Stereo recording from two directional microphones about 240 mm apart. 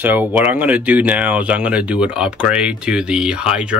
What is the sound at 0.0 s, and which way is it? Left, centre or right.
Speech, centre.